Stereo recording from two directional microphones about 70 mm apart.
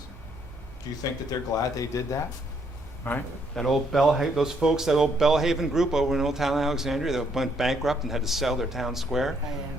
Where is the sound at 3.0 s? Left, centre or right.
Left.